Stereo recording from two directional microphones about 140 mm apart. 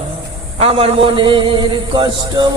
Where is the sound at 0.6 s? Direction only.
40° right (ahead or behind).